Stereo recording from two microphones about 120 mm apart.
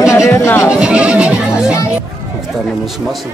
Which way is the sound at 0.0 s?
25° left (ahead or behind).